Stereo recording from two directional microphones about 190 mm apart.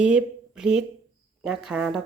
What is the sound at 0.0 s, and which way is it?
A woman's voice, 5° right (ahead or behind).